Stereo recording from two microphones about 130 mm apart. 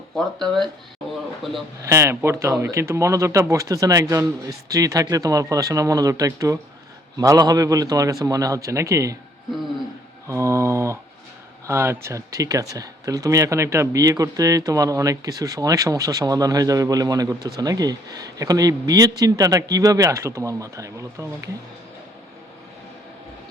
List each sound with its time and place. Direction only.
0.1 s speech: 5° left (ahead or behind)
1.8 s speech: 20° right (ahead or behind)
10.2 s mantra: 25° right (ahead or behind)
11.6 s speech: 20° right (ahead or behind)